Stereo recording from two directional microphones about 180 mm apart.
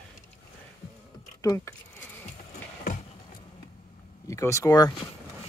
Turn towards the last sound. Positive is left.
turn(degrees=20)  # may be behind; listen again after turning